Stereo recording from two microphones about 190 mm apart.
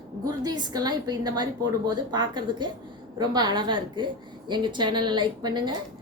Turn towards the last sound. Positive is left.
turn(degrees=-25)  # may be behind; listen again after turning